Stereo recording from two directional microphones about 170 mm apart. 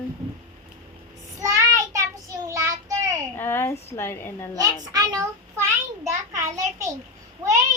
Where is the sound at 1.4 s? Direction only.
20° right (ahead or behind).